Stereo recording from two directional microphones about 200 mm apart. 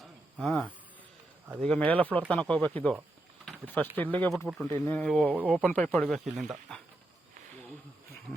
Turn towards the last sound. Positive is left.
turn(degrees=0)  # may be behind; listen again after turning